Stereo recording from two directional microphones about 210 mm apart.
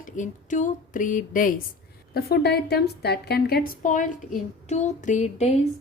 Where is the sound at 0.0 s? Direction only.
35° left (ahead or behind).